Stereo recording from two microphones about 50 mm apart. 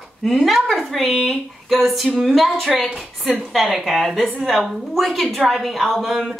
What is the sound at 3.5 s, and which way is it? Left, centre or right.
Speech, centre.